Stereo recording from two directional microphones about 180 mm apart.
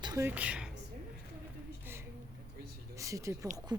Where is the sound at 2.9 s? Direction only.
15° right (ahead or behind).